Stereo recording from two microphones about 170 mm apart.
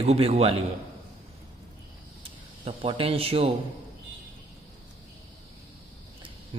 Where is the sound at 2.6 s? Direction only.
35° right (ahead or behind).